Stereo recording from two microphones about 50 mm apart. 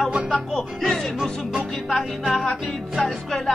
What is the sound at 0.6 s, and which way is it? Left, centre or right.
Speech, centre.